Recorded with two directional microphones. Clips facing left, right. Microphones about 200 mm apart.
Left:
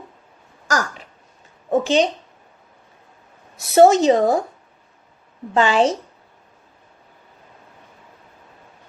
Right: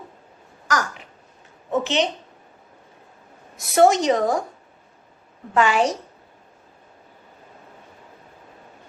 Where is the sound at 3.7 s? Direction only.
25° left (ahead or behind).